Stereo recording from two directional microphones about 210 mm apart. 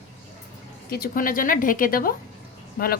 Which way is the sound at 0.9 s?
45° left (ahead or behind).